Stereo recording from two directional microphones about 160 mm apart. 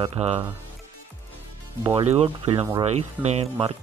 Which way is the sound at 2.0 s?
40° right (ahead or behind).